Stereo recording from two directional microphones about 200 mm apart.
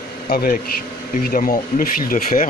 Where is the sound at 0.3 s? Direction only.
50° left (ahead or behind).